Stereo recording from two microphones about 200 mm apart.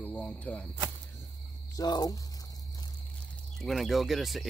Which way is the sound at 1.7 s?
20° left (ahead or behind).